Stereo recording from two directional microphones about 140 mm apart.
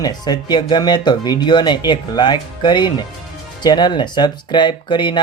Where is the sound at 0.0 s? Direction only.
30° left (ahead or behind).